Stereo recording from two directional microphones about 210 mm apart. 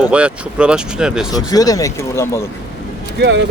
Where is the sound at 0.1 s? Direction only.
5° right (ahead or behind).